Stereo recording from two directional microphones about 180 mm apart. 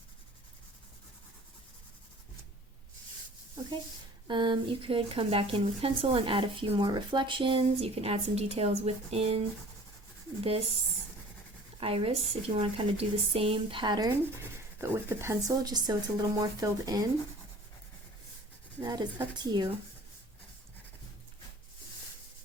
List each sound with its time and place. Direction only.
4.3 s speech: 25° right (ahead or behind)
11.8 s speech: 30° right (ahead or behind)
18.8 s speech: 20° right (ahead or behind)